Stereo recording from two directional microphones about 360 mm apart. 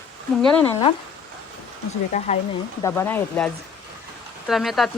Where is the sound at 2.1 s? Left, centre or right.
Centre.